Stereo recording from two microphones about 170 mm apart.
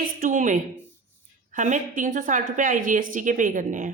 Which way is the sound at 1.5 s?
45° right (ahead or behind).